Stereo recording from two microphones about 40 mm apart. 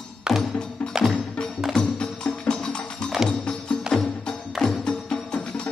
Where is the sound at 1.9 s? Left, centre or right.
Centre.